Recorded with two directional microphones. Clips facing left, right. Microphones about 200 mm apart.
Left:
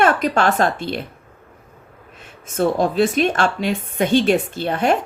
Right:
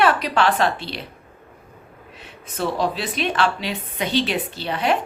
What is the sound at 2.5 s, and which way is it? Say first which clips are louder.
Speech: left 5 dB; 45° left (ahead or behind).